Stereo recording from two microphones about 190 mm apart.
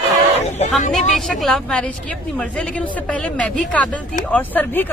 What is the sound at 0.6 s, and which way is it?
Vehicle, 35° left (ahead or behind).